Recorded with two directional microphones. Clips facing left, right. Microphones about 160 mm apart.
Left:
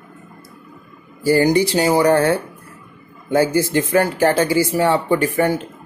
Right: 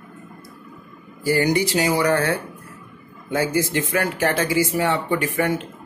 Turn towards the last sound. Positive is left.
turn(degrees=35)  # may be behind; listen again after turning